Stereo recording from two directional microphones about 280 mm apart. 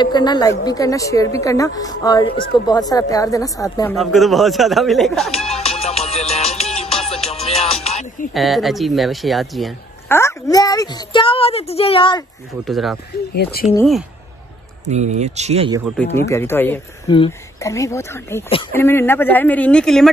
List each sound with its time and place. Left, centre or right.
0.0 s speech: centre
3.9 s speech: centre
5.5 s music: left
8.3 s speech: centre
12.6 s speech: centre
13.3 s speech: left
13.7 s speech: centre
14.9 s speech: right
16.3 s speech: centre